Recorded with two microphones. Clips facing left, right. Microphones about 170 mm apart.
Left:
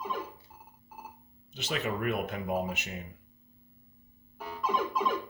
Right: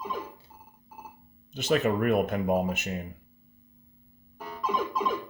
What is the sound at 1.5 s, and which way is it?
Speech, 50° right (ahead or behind).